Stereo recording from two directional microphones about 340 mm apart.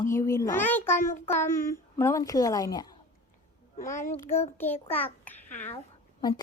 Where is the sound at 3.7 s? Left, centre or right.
Left.